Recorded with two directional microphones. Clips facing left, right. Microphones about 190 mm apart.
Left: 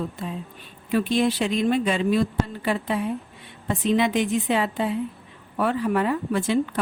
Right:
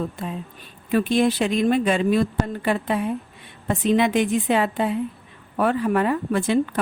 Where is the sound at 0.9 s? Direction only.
50° right (ahead or behind).